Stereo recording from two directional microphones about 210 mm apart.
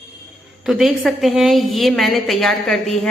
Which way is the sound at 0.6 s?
Centre (ahead or behind).